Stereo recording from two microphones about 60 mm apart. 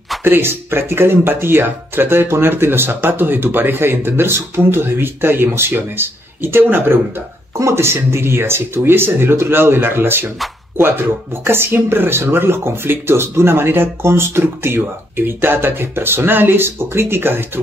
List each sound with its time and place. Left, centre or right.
0.2 s speech: right
7.5 s speech: right